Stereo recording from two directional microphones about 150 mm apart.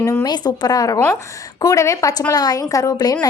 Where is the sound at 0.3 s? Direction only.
25° left (ahead or behind).